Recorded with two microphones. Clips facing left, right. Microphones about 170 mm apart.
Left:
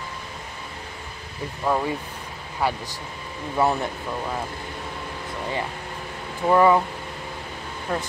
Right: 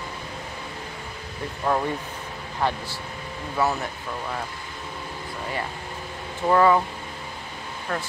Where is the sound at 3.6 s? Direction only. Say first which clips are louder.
Left 3 dB; 25° left (ahead or behind).